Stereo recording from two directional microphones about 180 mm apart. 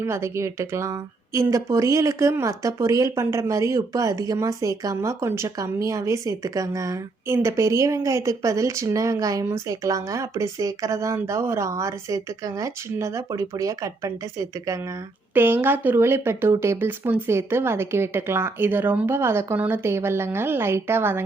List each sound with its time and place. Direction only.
0.0 s a woman's voice: 15° right (ahead or behind)